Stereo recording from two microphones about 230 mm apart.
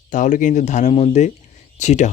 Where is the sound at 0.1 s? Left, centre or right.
Left.